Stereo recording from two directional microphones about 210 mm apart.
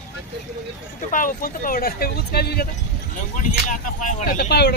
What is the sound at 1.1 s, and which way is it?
Speech, 40° left (ahead or behind).